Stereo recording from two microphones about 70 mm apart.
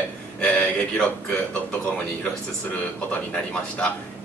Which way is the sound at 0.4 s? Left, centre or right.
Centre.